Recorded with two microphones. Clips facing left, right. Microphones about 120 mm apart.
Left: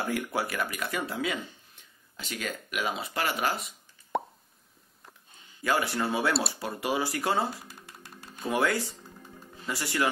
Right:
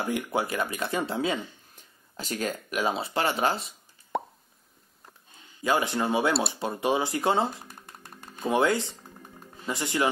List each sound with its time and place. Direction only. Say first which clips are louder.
0.0 s speech: right 2 dB; 20° right (ahead or behind)
4.1 s plop: even; centre (ahead or behind)
5.6 s speech: right 2 dB; 20° right (ahead or behind)